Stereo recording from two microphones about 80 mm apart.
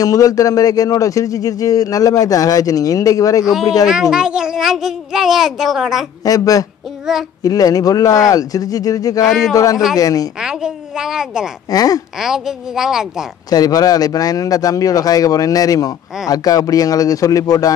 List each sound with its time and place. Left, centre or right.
0.0 s speech: left
3.8 s a child's voice: centre
6.2 s speech: left
7.1 s a child's voice: centre
7.4 s speech: left
9.2 s a child's voice: centre
9.9 s speech: left
10.4 s a woman's voice: centre
11.7 s speech: left
12.2 s a child's voice: centre
13.5 s speech: left